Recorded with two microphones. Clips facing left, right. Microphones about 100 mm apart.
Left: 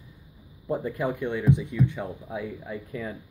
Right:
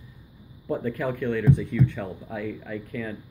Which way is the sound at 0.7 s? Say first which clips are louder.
Even; 20° left (ahead or behind).